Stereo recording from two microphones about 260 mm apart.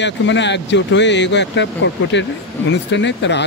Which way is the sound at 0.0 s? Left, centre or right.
Left.